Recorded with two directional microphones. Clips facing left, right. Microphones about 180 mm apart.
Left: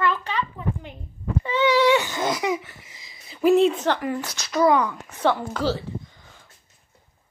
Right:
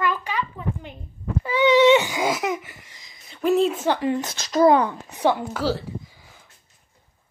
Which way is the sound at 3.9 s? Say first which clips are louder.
Right 4 dB; 25° right (ahead or behind).